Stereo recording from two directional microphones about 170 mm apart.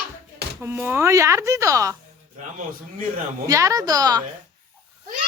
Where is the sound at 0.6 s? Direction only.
10° right (ahead or behind).